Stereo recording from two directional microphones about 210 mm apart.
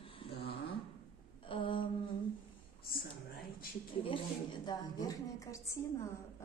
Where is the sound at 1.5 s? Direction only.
25° left (ahead or behind).